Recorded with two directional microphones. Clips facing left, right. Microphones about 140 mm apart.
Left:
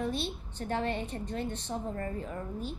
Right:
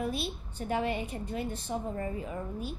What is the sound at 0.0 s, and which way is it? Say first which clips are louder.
A child's voice: even; 10° right (ahead or behind).